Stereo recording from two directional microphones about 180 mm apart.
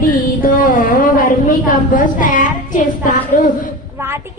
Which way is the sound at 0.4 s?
50° left (ahead or behind).